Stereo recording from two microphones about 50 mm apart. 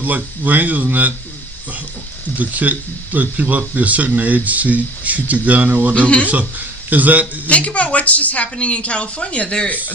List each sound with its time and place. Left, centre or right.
0.0 s speech: right
2.4 s speech: right
5.9 s speech: left
6.2 s speech: right
7.4 s speech: left